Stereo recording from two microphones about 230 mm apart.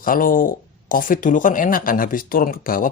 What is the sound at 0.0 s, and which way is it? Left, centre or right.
Speech, left.